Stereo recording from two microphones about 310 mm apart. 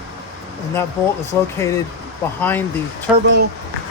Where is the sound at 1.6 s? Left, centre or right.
Centre.